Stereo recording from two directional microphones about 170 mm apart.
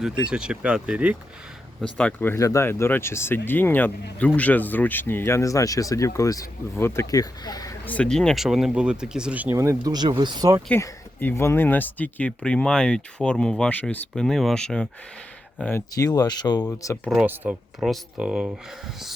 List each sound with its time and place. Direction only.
0.0 s speech: 5° right (ahead or behind)
1.8 s speech: 5° left (ahead or behind); by 7.7 s 20° left (ahead or behind)
7.9 s speech: 5° left (ahead or behind); by 10.6 s 25° right (ahead or behind)
10.7 s speech: 10° left (ahead or behind)
16.0 s speech: 25° left (ahead or behind)
17.1 s speech: 5° right (ahead or behind)